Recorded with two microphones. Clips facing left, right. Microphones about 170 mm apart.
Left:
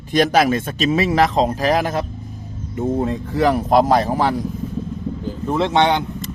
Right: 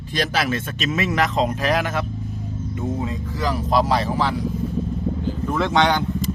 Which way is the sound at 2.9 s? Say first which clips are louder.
Left 7 dB; 55° left (ahead or behind).